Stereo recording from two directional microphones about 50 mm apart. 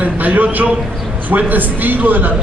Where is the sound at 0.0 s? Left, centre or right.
Right.